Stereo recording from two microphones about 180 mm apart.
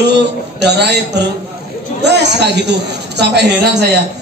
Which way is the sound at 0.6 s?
70° right (ahead or behind).